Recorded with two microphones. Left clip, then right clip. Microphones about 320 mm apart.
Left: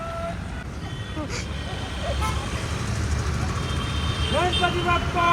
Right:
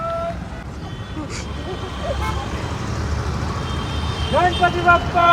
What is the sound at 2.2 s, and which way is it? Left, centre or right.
Speech, right.